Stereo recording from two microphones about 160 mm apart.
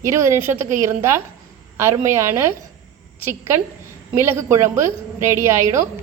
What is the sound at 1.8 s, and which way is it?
Speech, 15° right (ahead or behind).